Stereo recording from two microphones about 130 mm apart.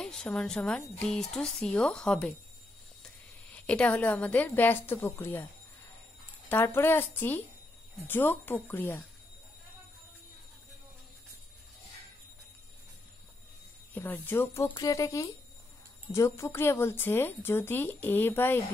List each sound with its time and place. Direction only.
0.0 s a woman's voice: 5° left (ahead or behind)
3.5 s speech: 10° left (ahead or behind)
6.5 s speech: 15° left (ahead or behind)
13.9 s speech: 15° left (ahead or behind)